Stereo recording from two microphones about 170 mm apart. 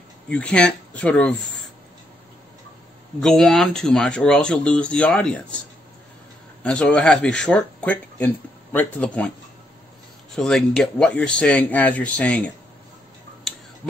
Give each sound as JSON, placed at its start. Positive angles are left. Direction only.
{"t": 0.3, "sound": "speech", "side_deg": 5}
{"t": 3.2, "sound": "speech", "side_deg": 0}
{"t": 6.6, "sound": "speech", "side_deg": 5}
{"t": 10.3, "sound": "speech", "side_deg": 5}